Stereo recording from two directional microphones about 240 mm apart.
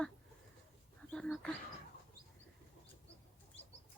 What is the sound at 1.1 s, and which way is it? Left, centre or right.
Bird, centre.